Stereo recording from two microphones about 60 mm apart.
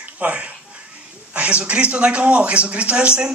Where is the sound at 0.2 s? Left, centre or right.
Right.